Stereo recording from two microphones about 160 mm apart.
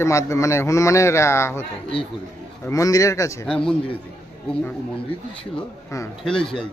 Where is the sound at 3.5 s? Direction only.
5° left (ahead or behind).